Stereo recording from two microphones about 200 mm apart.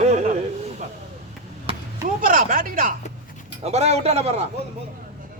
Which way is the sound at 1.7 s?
30° right (ahead or behind).